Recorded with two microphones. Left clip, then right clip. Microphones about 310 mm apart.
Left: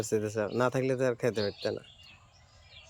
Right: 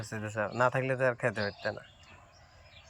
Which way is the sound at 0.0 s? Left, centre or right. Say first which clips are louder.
Left 5 dB; centre.